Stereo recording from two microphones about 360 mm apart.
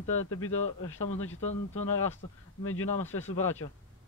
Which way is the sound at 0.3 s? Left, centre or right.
Left.